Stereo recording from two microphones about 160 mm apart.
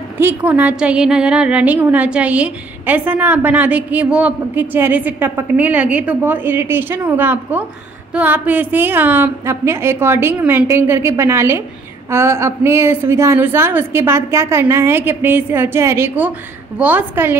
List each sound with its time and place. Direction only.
0.2 s a woman's voice: 10° right (ahead or behind)